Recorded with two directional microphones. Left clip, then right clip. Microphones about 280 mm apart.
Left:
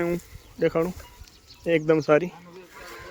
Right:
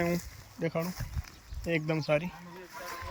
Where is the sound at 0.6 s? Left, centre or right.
Centre.